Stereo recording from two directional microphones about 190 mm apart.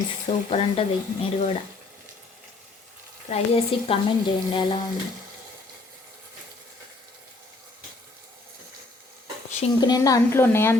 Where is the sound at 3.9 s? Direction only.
25° left (ahead or behind).